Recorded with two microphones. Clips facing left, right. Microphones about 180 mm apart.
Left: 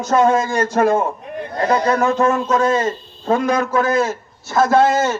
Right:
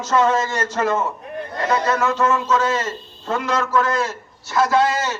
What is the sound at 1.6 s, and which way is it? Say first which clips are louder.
Speech: left 4 dB; 30° left (ahead or behind).